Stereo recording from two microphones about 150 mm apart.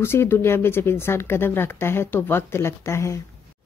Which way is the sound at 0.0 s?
15° left (ahead or behind).